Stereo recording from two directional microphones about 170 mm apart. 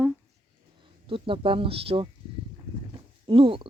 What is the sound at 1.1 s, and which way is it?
Speech, 30° right (ahead or behind).